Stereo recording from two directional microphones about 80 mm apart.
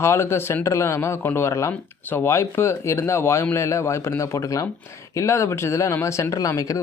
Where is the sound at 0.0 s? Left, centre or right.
Left.